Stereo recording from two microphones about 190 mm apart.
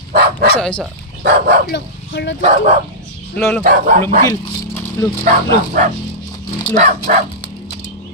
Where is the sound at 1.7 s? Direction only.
65° left (ahead or behind).